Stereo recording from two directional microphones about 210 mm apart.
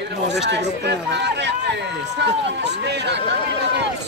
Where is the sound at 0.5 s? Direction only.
55° right (ahead or behind).